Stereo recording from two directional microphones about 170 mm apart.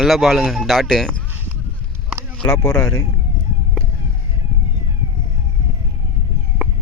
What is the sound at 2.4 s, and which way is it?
Speech, 5° left (ahead or behind).